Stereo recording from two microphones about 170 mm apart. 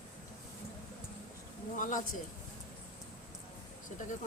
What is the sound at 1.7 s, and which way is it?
Speech, 50° left (ahead or behind).